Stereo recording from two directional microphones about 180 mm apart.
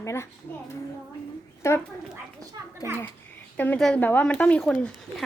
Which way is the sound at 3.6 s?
5° left (ahead or behind).